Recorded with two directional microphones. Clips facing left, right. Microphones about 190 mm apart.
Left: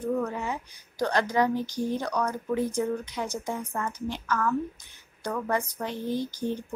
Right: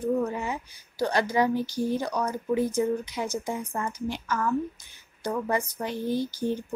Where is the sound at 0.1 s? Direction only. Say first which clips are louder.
Right 1 dB; 10° right (ahead or behind).